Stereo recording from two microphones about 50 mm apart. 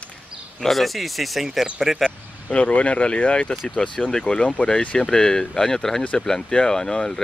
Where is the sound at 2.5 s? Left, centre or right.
Left.